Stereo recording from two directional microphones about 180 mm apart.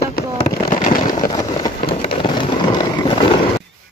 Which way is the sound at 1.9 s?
30° left (ahead or behind).